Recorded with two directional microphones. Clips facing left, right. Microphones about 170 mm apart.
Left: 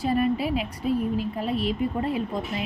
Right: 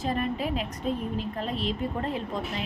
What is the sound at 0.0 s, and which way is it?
A woman's voice, 10° left (ahead or behind).